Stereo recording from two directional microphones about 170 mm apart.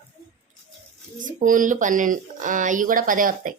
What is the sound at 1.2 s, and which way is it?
Speech, 50° right (ahead or behind).